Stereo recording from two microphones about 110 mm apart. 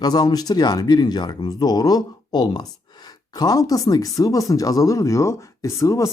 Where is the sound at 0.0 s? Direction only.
35° left (ahead or behind).